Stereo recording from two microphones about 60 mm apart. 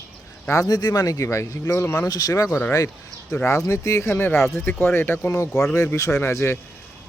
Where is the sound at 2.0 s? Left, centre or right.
Left.